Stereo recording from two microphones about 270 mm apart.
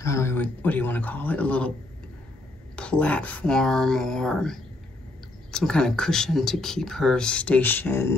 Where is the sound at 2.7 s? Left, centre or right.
Centre.